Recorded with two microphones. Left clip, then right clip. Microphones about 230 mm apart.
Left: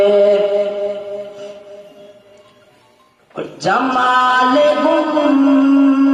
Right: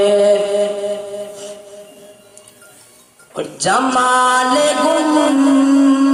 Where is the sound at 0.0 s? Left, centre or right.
Right.